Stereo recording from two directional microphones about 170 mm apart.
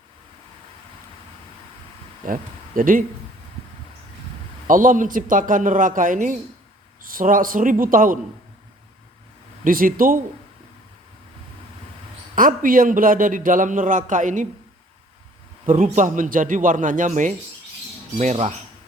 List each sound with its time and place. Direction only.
2.2 s speech: 55° right (ahead or behind)
4.6 s a man's voice: 50° right (ahead or behind)
9.6 s speech: 55° right (ahead or behind)
12.4 s a man's voice: 55° right (ahead or behind)
15.6 s a man's voice: 50° right (ahead or behind)